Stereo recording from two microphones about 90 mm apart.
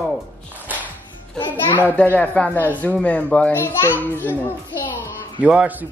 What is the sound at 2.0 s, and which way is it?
Speech, 15° left (ahead or behind).